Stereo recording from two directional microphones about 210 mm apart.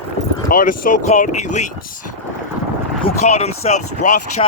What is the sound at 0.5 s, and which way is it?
Speech, 40° left (ahead or behind).